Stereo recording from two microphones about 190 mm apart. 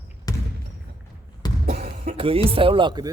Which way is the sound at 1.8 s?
45° right (ahead or behind).